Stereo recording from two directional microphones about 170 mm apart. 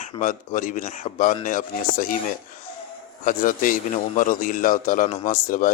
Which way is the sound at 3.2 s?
50° left (ahead or behind).